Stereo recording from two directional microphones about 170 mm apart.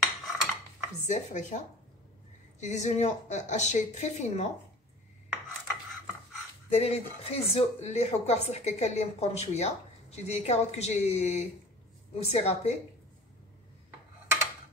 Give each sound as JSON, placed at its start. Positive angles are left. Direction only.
{"t": 0.0, "sound": "cutlery", "side_deg": 0}
{"t": 1.0, "sound": "a woman's voice", "side_deg": 45}
{"t": 2.6, "sound": "a woman's voice", "side_deg": 45}
{"t": 6.7, "sound": "speech", "side_deg": 35}